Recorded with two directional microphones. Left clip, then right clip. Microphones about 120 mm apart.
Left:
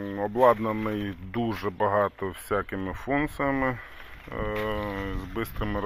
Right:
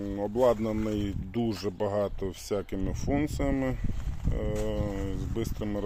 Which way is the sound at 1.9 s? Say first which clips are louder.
Left 5 dB; 40° right (ahead or behind).